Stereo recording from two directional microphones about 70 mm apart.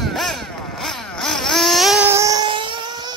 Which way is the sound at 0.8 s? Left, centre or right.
Centre.